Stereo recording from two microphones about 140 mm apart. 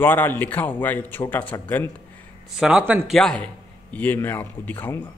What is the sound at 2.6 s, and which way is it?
A man's voice, 5° right (ahead or behind).